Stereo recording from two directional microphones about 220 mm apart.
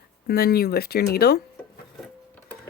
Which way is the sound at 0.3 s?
45° left (ahead or behind).